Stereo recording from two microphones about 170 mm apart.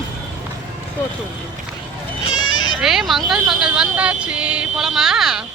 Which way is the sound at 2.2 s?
25° left (ahead or behind).